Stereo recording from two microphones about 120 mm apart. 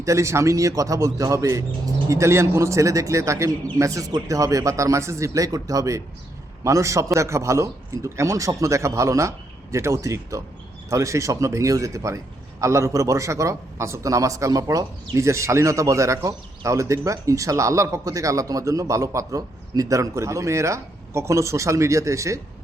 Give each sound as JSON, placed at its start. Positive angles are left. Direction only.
{"t": 0.0, "sound": "speech", "side_deg": -25}